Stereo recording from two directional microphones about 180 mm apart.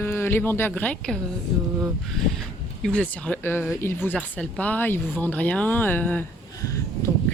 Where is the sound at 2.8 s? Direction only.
5° left (ahead or behind).